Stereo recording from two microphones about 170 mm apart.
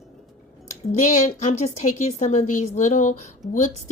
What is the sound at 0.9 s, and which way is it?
A woman's voice, 45° left (ahead or behind).